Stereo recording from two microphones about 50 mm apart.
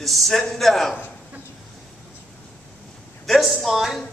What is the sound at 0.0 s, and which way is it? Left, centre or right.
Speech, centre.